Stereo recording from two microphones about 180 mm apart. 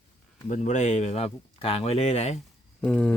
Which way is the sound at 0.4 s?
40° left (ahead or behind).